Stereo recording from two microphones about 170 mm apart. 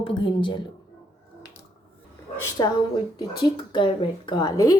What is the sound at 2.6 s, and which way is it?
Speech, 25° left (ahead or behind).